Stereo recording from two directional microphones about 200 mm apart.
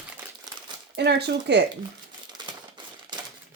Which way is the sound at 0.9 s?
55° right (ahead or behind).